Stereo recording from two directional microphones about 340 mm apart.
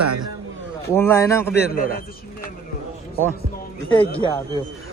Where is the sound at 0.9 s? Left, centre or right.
Centre.